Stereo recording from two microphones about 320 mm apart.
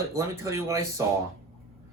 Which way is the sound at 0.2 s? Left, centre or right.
Centre.